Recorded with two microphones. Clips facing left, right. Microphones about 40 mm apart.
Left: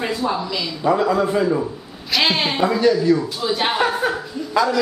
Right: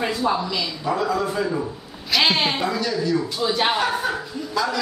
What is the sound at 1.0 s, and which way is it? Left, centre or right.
Speech, centre.